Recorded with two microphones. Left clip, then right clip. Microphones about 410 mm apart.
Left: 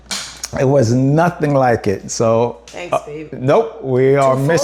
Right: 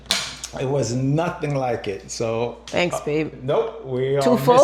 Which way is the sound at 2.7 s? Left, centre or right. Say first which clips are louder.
Left 1 dB; right.